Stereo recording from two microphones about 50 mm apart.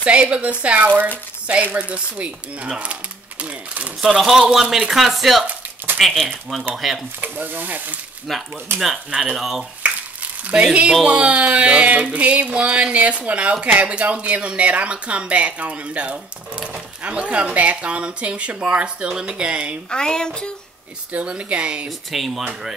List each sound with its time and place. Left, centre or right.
0.0 s a sound: right
4.0 s speech: centre
7.2 s speech: right
8.3 s speech: centre
9.1 s speech: centre
9.4 s speech: centre
10.4 s a sound: right
19.9 s speech: centre
21.1 s a sound: right
21.8 s speech: centre